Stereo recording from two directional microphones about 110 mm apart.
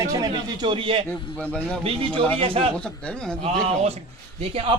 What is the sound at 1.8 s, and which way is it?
Speech, 55° right (ahead or behind).